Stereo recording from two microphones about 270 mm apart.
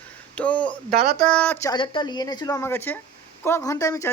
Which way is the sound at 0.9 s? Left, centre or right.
Right.